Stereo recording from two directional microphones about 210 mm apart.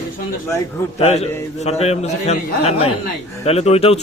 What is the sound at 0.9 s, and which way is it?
A man's voice, 30° left (ahead or behind).